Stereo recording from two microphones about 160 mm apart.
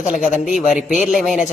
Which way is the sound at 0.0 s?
50° left (ahead or behind).